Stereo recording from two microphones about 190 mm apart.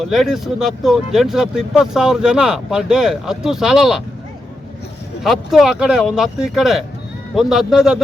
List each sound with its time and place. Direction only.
0.0 s speech: centre (ahead or behind)
5.2 s speech: centre (ahead or behind)